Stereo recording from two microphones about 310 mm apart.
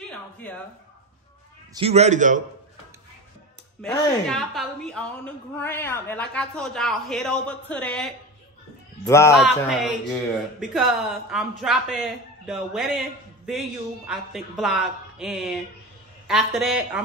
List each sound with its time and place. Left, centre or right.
1.7 s a man's voice: centre
3.8 s a woman's voice: centre